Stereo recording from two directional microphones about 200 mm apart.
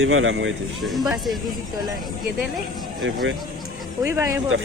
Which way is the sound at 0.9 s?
Centre (ahead or behind).